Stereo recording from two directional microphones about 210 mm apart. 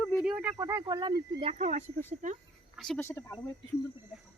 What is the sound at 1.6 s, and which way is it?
Speech, 35° right (ahead or behind).